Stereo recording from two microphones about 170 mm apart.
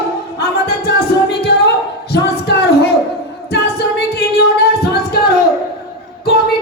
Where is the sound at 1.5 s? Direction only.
75° left (ahead or behind).